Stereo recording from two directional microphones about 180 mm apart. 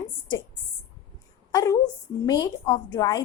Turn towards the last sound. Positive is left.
turn(degrees=20)  # may be behind; listen again after turning